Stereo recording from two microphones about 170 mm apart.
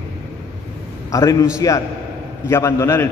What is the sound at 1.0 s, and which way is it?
A man's voice, 20° left (ahead or behind).